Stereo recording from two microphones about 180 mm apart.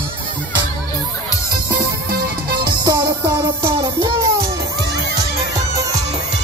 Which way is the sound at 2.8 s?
25° right (ahead or behind).